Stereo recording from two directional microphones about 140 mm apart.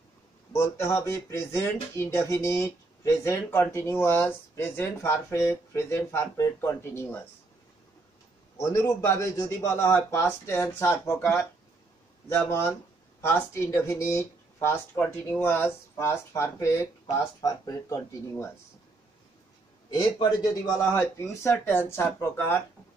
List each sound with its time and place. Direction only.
0.5 s speech: 20° left (ahead or behind)
8.5 s speech: 20° left (ahead or behind)
19.9 s speech: 30° left (ahead or behind)